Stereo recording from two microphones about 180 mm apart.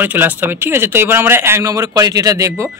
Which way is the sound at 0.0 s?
10° right (ahead or behind).